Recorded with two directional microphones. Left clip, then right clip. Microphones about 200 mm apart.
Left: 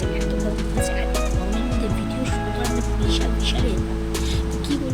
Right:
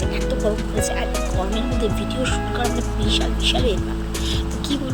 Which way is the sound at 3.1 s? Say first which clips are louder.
Right 5 dB; 20° right (ahead or behind).